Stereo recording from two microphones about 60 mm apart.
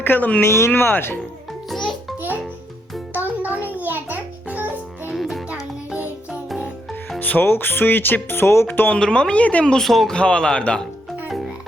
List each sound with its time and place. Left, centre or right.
0.0 s speech: left
0.4 s speech: left
0.7 s speech: left
1.7 s music: centre
3.1 s music: right
5.1 s music: centre
7.2 s speech: left
9.0 s speech: centre
9.7 s speech: centre
10.2 s speech: centre